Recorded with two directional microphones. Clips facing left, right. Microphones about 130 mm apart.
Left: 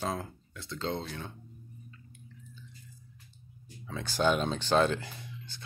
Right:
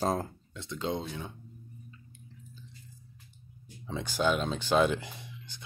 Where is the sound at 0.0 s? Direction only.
40° right (ahead or behind).